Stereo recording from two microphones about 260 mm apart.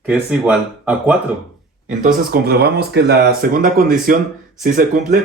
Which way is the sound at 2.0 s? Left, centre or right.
Right.